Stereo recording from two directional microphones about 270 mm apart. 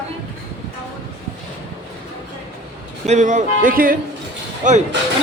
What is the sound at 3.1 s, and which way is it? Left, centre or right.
A man's voice, right.